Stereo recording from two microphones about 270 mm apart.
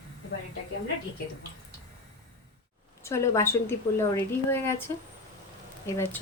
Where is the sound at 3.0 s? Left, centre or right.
Centre.